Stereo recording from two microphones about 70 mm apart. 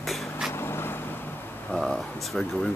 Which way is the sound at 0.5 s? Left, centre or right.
Left.